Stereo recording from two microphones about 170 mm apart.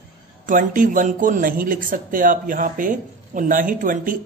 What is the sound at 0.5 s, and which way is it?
Speech, 50° right (ahead or behind).